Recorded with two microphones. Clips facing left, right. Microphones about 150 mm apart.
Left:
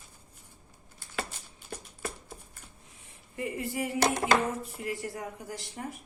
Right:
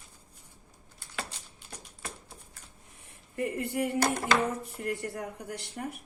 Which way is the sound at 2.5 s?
65° right (ahead or behind).